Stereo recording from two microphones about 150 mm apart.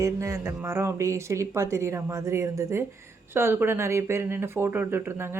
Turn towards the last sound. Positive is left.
turn(degrees=-15)  # may be behind; listen again after turning